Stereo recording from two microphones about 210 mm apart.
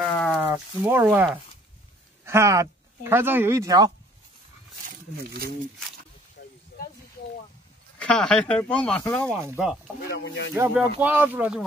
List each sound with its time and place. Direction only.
0.3 s speech: 10° right (ahead or behind)
4.8 s a sound: 45° right (ahead or behind)
6.4 s snake: 50° left (ahead or behind)
8.0 s speech: 5° left (ahead or behind)
9.4 s speech: 10° right (ahead or behind)
10.0 s speech: 55° left (ahead or behind)
10.5 s speech: 10° right (ahead or behind)